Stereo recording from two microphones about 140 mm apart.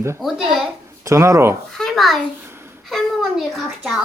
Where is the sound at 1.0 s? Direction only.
20° right (ahead or behind).